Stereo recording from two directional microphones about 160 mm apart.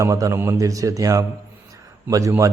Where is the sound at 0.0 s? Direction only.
20° right (ahead or behind).